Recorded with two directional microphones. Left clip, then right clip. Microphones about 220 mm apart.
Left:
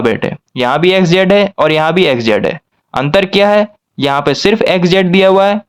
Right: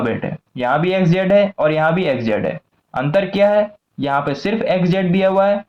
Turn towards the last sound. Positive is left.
turn(degrees=40)  # may be behind; listen again after turning